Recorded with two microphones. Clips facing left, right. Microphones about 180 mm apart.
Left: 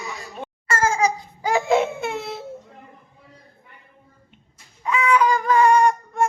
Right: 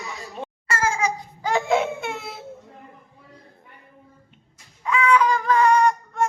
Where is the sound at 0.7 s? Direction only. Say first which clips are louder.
Left 4 dB; 45° left (ahead or behind).